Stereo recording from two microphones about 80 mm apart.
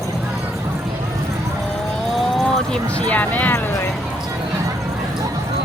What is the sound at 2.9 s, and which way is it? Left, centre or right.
Speech, centre.